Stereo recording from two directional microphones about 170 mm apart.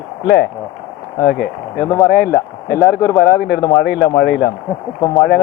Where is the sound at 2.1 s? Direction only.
60° left (ahead or behind).